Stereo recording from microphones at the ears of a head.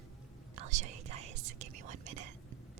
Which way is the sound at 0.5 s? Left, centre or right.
Right.